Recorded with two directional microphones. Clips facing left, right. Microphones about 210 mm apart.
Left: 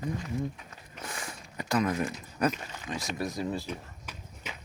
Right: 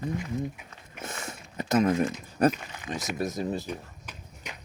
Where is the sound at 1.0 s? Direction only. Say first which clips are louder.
Right 2 dB; 25° right (ahead or behind).